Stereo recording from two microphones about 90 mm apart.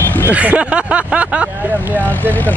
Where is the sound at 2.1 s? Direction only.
20° left (ahead or behind).